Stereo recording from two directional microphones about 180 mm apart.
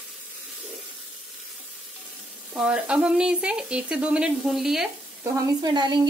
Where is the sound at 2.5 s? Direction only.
5° right (ahead or behind).